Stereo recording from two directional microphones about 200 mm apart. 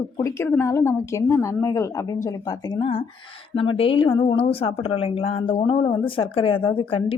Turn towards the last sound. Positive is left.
turn(degrees=25)  # may be behind; listen again after turning